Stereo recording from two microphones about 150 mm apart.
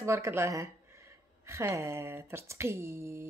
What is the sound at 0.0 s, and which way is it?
Speech, 20° right (ahead or behind).